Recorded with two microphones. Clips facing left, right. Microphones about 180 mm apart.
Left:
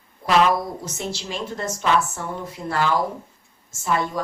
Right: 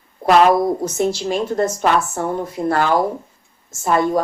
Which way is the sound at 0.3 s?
50° right (ahead or behind).